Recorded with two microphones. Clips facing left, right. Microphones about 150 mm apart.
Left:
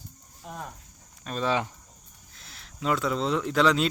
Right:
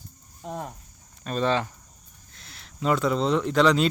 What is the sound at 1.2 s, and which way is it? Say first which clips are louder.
Speech: right 3 dB; centre (ahead or behind).